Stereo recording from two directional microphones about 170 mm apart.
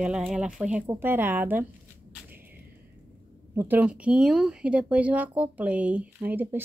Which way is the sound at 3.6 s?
10° right (ahead or behind).